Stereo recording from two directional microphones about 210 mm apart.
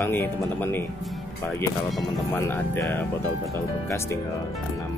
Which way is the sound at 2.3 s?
10° left (ahead or behind).